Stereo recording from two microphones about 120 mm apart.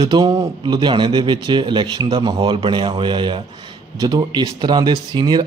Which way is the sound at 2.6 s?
45° right (ahead or behind).